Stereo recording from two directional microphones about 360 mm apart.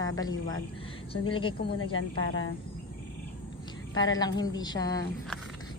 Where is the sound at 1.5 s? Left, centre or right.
Left.